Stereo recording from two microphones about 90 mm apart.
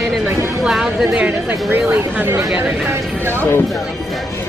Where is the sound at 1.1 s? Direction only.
15° right (ahead or behind).